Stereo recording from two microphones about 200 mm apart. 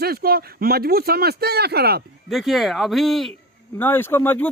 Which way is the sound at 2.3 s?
Centre (ahead or behind).